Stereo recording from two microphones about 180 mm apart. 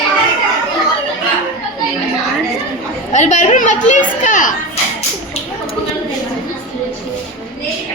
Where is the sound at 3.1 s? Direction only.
40° left (ahead or behind).